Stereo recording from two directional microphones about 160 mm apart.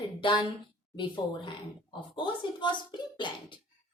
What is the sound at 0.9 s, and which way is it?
Speech, 30° left (ahead or behind).